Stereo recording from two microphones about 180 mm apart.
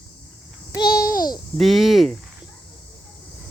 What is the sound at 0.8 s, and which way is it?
Babbling, 60° left (ahead or behind).